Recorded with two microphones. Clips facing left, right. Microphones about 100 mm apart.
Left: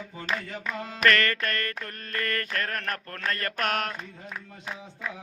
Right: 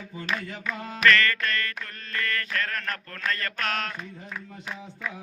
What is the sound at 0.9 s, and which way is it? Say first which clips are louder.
Mantra: right 2 dB; 45° left (ahead or behind).